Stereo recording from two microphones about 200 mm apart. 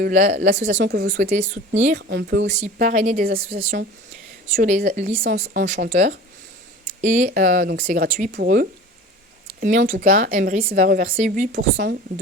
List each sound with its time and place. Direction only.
0.0 s speech: 45° right (ahead or behind)
0.7 s speech: 55° right (ahead or behind)
1.4 s speech: 35° right (ahead or behind)
2.0 s speech: 55° right (ahead or behind)
2.7 s speech: 40° right (ahead or behind)
8.3 s speech: 50° right (ahead or behind)